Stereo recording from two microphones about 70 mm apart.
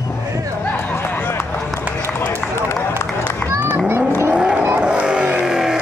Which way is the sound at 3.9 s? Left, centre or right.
Right.